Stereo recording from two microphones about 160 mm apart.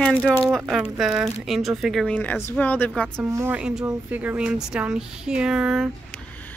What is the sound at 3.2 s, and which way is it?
Speech, 15° right (ahead or behind).